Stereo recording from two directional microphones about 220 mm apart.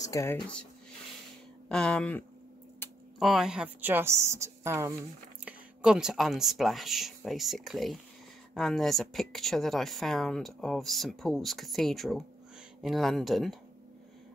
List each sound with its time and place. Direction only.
0.0 s speech: 15° left (ahead or behind)
1.7 s a woman's voice: 5° left (ahead or behind)